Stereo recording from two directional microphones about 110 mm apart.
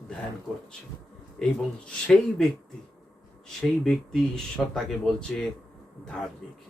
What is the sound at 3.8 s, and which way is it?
Speech, 5° left (ahead or behind).